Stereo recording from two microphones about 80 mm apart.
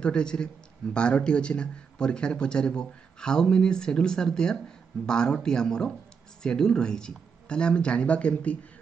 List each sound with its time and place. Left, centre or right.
0.0 s speech: centre